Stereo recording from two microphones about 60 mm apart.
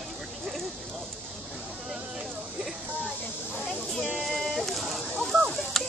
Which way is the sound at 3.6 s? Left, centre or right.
Centre.